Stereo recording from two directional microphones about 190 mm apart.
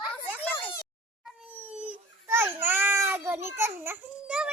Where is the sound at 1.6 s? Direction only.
10° right (ahead or behind).